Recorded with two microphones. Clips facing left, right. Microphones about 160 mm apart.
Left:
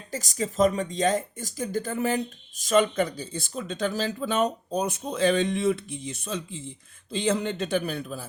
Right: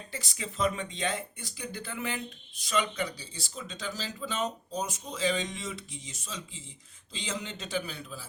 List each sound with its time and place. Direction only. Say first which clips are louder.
0.1 s speech: left 12 dB; 40° left (ahead or behind)